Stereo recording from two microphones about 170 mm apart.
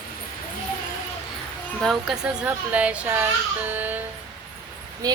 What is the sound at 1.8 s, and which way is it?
A child's voice, 5° right (ahead or behind).